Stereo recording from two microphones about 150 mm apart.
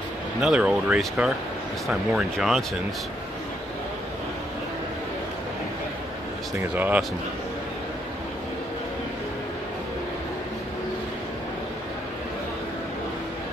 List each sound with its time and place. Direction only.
0.4 s speech: 5° right (ahead or behind)
6.7 s speech: 10° right (ahead or behind)